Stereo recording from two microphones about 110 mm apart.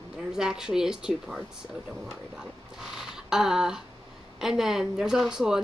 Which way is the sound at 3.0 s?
5° right (ahead or behind).